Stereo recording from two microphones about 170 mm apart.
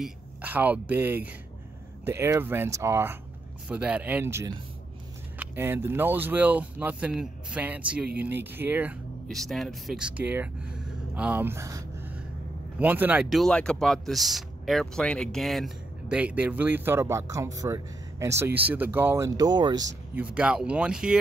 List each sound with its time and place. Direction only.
0.0 s speech: 10° right (ahead or behind)
9.3 s speech: centre (ahead or behind); by 19.9 s 25° right (ahead or behind)
20.2 s speech: 5° right (ahead or behind)